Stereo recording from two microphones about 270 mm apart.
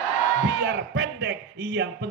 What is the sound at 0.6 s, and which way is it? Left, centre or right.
A man's voice, right.